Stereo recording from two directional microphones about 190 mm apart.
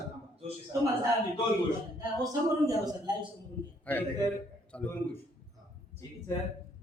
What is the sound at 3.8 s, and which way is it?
A man's voice, 10° left (ahead or behind).